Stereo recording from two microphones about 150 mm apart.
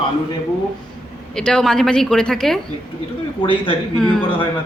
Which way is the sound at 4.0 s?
Centre (ahead or behind).